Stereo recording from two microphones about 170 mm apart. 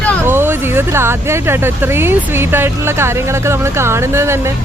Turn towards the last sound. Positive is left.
turn(degrees=-15)  # may be behind; listen again after turning